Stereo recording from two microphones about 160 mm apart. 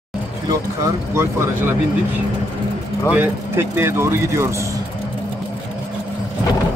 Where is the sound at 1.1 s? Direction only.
15° right (ahead or behind).